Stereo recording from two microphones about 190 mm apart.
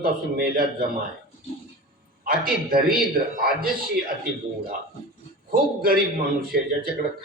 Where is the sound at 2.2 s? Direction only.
50° right (ahead or behind).